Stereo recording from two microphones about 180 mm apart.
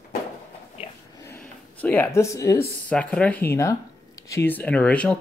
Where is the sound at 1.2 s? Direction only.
10° left (ahead or behind).